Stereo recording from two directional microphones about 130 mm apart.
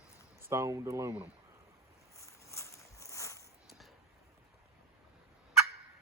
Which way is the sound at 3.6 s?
Centre (ahead or behind).